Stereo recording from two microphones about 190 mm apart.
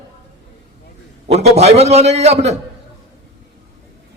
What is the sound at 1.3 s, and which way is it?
A man's voice, 35° right (ahead or behind).